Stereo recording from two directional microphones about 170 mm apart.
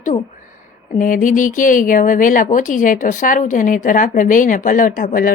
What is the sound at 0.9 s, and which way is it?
Speech, 50° left (ahead or behind).